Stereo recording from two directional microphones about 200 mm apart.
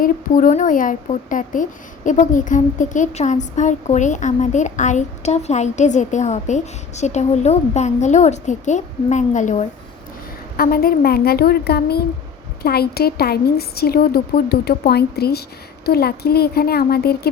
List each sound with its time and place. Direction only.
0.0 s speech: 40° left (ahead or behind)
10.6 s a woman's voice: 50° left (ahead or behind)